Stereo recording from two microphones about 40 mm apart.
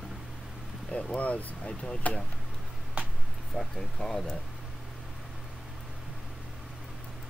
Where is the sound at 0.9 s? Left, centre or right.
Left.